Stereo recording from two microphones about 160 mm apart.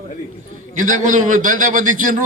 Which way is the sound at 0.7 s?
55° right (ahead or behind).